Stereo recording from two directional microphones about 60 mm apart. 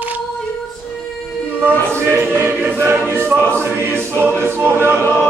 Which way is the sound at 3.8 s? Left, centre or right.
Right.